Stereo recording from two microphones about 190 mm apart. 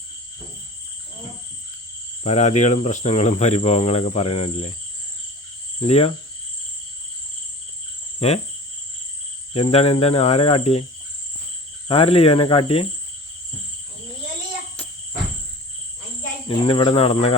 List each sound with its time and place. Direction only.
2.2 s speech: 35° left (ahead or behind)
5.8 s speech: 35° left (ahead or behind)
8.2 s speech: 30° left (ahead or behind)
9.5 s speech: 35° left (ahead or behind)
11.9 s speech: 30° left (ahead or behind)
16.5 s cricket: 30° left (ahead or behind)